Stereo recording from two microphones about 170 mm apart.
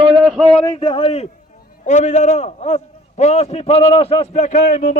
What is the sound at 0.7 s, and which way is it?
A man's voice, 30° left (ahead or behind).